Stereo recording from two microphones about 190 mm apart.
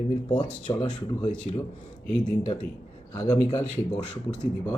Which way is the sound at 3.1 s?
15° left (ahead or behind).